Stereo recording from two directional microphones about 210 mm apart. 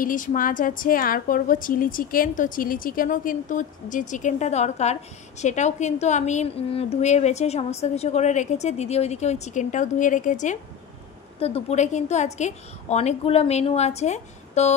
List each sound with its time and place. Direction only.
0.0 s a woman's voice: 40° left (ahead or behind)